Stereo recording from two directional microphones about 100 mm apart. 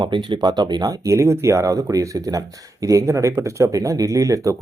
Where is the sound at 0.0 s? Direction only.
55° right (ahead or behind).